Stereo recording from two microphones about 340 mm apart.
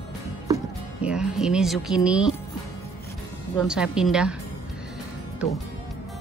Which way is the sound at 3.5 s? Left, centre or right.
Centre.